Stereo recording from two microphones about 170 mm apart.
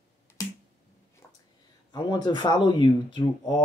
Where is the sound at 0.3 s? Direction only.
15° left (ahead or behind).